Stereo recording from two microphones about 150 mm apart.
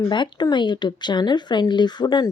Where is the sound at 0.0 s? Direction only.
30° left (ahead or behind).